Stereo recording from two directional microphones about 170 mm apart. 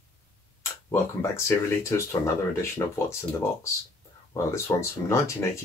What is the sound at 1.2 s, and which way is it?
Speech, 15° left (ahead or behind).